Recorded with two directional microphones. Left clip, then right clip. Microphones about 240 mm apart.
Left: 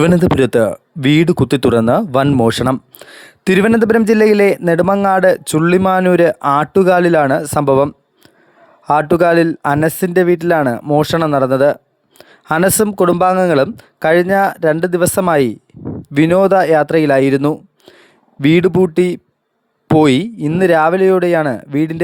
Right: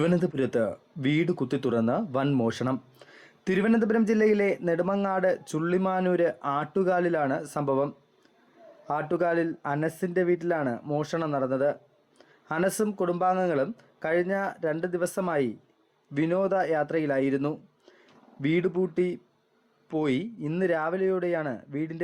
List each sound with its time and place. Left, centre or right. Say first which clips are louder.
0.0 s speech: left 14 dB; left